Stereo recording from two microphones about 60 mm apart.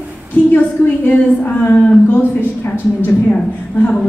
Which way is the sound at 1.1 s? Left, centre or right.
Left.